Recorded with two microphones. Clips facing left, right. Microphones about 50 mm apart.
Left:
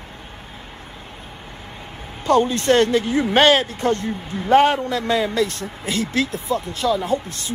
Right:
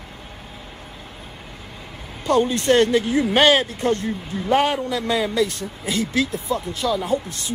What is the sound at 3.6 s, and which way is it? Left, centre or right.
A man's voice, left.